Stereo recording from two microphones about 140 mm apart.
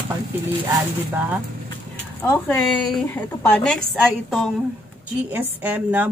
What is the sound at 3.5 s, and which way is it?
Speech, 5° left (ahead or behind).